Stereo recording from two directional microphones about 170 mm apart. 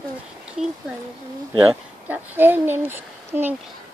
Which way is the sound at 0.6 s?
5° right (ahead or behind).